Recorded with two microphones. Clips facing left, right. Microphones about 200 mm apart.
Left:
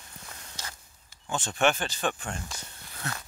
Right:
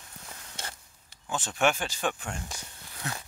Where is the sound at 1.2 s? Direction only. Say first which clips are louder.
Left 1 dB; 5° right (ahead or behind).